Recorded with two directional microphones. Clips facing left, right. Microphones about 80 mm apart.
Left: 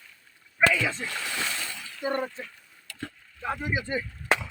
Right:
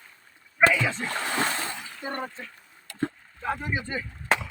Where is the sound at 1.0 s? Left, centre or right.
Right.